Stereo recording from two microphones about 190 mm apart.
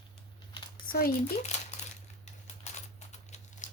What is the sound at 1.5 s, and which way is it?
Crumpling, 35° left (ahead or behind).